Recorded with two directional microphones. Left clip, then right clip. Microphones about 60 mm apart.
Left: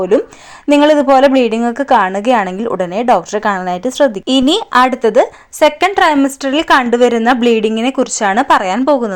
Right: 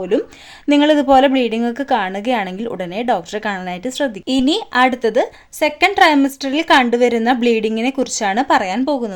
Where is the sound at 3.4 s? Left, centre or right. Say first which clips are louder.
Left 7 dB; left.